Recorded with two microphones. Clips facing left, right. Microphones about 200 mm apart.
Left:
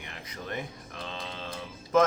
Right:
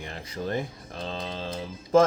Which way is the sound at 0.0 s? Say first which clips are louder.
Right 8 dB; 30° right (ahead or behind).